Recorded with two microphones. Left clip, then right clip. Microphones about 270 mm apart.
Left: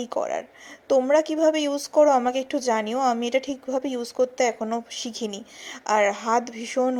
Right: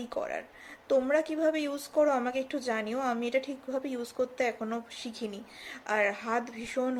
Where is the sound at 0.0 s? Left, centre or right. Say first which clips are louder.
Left 8 dB; left.